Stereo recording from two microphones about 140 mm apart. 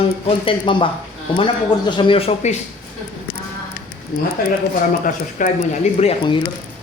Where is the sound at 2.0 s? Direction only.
40° left (ahead or behind).